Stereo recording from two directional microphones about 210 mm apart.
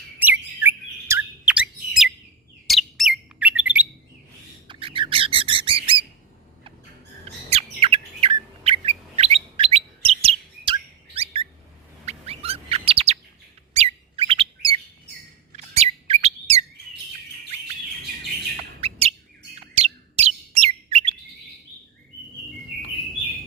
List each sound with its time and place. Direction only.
0.2 s chirp: 10° right (ahead or behind)
2.6 s bird: centre (ahead or behind)
4.7 s bird: 25° right (ahead or behind)
7.5 s bird: 25° right (ahead or behind)
18.8 s bird: 30° right (ahead or behind)
19.5 s chirp: 30° right (ahead or behind)